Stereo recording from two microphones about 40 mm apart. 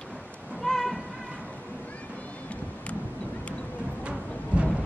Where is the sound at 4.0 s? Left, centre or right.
Right.